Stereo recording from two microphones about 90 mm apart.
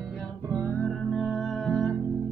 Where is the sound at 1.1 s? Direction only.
Centre (ahead or behind).